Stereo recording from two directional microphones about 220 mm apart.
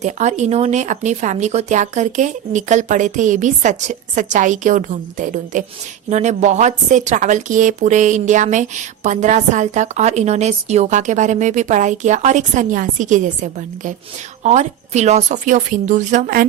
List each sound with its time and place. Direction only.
0.0 s a woman's voice: 30° right (ahead or behind)